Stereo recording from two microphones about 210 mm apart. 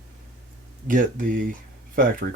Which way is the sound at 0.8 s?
40° right (ahead or behind).